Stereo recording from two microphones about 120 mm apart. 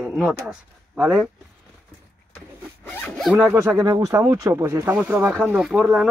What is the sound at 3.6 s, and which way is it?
Speech, 25° right (ahead or behind).